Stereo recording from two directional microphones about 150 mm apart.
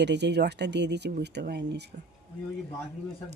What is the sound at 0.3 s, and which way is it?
Speech, 90° right.